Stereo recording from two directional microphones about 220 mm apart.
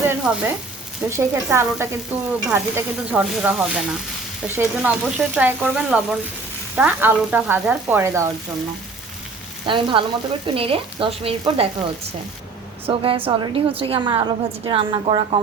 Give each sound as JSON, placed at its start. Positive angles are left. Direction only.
{"t": 0.1, "sound": "frying", "side_deg": -10}
{"t": 2.5, "sound": "speech", "side_deg": -10}
{"t": 4.4, "sound": "frying", "side_deg": -10}
{"t": 9.6, "sound": "a woman's voice", "side_deg": -20}
{"t": 12.9, "sound": "a woman's voice", "side_deg": -25}